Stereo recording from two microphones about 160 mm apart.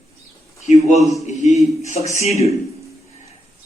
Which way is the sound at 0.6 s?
45° left (ahead or behind).